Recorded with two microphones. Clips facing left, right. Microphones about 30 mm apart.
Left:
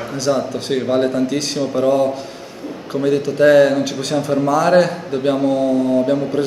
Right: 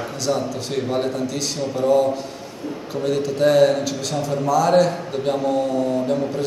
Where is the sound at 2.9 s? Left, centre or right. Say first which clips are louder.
Left 6 dB; centre.